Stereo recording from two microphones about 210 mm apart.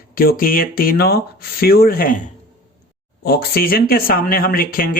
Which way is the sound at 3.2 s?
45° left (ahead or behind).